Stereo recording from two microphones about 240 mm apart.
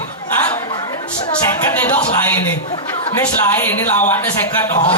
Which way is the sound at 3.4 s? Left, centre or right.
Centre.